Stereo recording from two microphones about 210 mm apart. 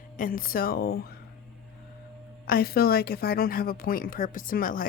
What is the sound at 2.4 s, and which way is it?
Speech, 45° left (ahead or behind).